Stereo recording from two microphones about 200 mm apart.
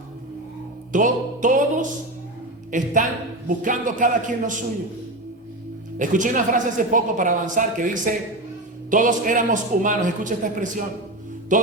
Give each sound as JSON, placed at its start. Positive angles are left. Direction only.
{"t": 0.9, "sound": "a woman's voice", "side_deg": -40}
{"t": 6.0, "sound": "a woman's voice", "side_deg": -40}
{"t": 11.5, "sound": "mantra", "side_deg": -40}